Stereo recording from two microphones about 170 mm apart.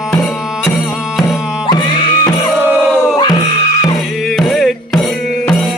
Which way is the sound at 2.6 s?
10° right (ahead or behind).